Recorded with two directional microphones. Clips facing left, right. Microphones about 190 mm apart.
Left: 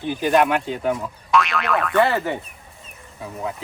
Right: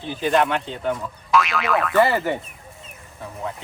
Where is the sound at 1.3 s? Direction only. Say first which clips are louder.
Even; centre (ahead or behind).